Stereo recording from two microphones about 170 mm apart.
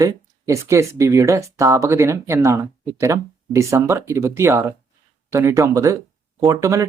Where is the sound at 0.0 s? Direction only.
15° right (ahead or behind).